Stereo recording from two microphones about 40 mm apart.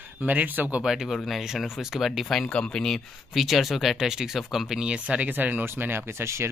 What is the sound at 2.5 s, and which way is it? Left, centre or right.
Speech, left.